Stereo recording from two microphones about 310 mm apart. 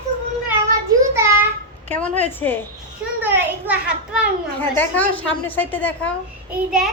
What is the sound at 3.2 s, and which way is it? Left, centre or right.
Speech, centre.